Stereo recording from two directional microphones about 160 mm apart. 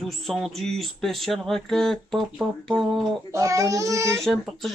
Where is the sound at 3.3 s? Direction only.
20° right (ahead or behind).